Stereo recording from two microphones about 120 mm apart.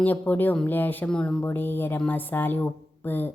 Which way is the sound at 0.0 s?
15° left (ahead or behind).